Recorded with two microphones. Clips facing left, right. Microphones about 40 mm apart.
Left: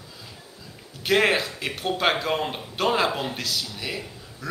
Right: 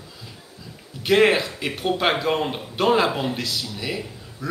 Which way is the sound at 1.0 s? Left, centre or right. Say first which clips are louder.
Right 4 dB; centre.